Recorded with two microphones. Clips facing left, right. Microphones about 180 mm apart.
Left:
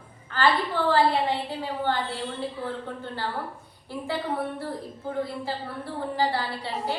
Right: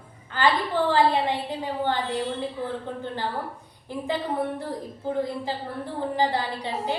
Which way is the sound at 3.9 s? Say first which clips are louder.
Right 2 dB; 15° right (ahead or behind).